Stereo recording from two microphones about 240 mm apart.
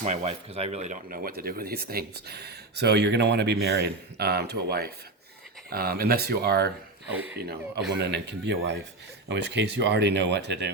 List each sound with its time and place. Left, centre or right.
0.0 s speech: right
7.1 s speech: centre
8.0 s speech: right